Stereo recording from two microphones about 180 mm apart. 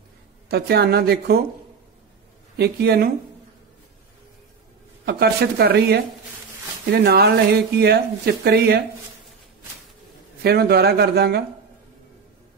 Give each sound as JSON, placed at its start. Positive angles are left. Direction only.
{"t": 0.5, "sound": "speech", "side_deg": -60}
{"t": 2.5, "sound": "speech", "side_deg": -65}
{"t": 5.0, "sound": "speech", "side_deg": -65}
{"t": 10.4, "sound": "speech", "side_deg": -60}